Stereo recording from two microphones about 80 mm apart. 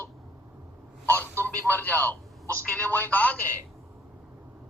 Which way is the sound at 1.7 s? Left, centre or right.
Left.